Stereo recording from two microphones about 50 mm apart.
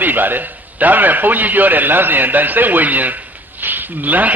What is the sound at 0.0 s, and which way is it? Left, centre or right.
A man's voice, right.